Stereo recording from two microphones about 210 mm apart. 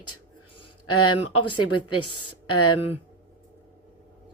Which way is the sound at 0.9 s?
90° left.